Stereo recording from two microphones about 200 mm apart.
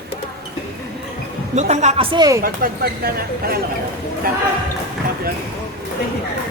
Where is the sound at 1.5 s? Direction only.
35° right (ahead or behind).